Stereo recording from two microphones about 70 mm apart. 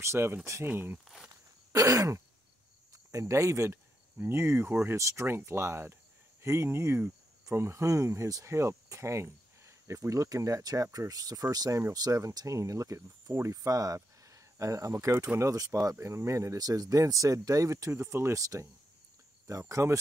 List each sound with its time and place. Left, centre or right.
0.0 s speech: right
1.3 s throat clearing: right
2.9 s speech: right
17.9 s speech: right
19.7 s speech: right